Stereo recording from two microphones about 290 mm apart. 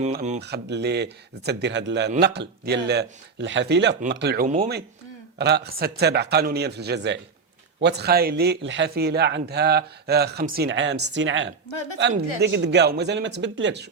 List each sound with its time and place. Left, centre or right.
0.0 s speech: right
0.4 s speech: right
5.4 s speech: right